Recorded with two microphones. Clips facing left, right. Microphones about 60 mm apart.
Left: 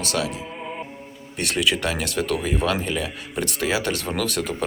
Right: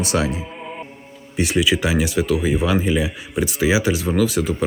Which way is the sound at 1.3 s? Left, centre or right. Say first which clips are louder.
Right 4 dB; centre.